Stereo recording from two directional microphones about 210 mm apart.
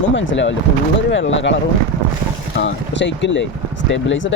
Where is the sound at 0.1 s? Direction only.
65° left (ahead or behind).